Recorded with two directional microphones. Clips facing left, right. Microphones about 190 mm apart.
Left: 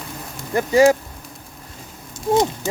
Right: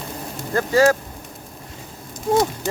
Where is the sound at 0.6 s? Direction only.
15° left (ahead or behind).